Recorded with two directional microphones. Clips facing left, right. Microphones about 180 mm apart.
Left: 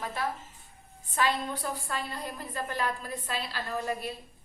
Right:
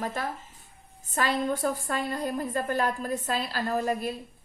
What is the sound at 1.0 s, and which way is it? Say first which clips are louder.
A woman's voice: right 2 dB; 45° right (ahead or behind).